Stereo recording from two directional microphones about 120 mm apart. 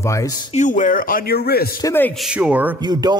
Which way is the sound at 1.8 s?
30° left (ahead or behind).